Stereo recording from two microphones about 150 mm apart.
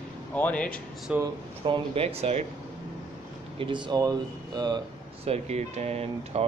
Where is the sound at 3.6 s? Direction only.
30° right (ahead or behind).